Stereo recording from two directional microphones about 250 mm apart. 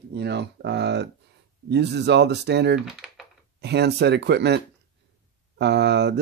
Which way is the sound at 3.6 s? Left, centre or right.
Right.